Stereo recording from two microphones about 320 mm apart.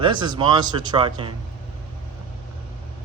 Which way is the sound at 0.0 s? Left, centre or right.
Centre.